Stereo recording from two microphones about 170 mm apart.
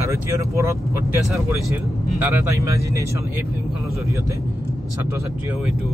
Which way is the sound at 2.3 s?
15° right (ahead or behind).